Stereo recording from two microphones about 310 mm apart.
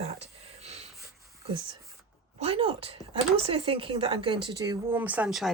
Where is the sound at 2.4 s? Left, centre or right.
Centre.